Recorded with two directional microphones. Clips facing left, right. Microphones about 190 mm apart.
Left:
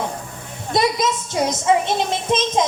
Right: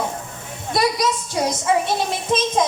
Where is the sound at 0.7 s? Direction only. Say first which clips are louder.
Left 1 dB; 20° left (ahead or behind).